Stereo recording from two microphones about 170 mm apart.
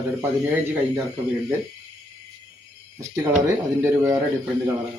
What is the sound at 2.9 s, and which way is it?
A man's voice, 15° right (ahead or behind).